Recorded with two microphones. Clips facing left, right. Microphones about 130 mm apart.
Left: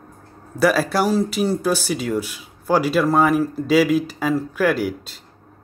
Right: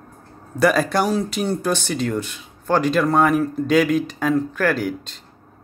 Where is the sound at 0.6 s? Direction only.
5° left (ahead or behind).